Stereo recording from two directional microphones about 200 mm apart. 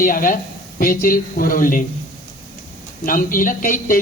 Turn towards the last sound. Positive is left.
turn(degrees=45)  # may be behind; listen again after turning